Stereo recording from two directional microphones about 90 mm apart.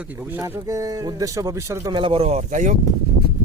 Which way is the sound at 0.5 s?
40° right (ahead or behind).